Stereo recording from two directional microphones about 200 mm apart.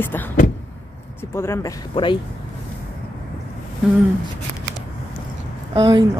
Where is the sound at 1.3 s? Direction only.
10° left (ahead or behind).